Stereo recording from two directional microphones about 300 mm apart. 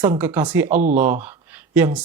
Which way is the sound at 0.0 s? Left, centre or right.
Centre.